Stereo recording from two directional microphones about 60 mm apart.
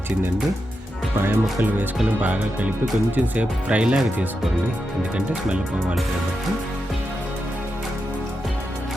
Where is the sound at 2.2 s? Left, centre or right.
Right.